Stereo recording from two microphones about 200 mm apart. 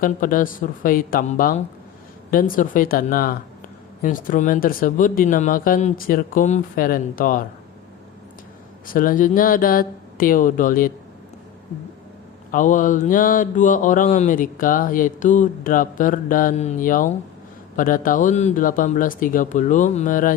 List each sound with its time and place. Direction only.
0.0 s speech: 45° left (ahead or behind)
8.9 s speech: 45° left (ahead or behind)
12.5 s mantra: 40° left (ahead or behind)
17.7 s speech: 45° left (ahead or behind)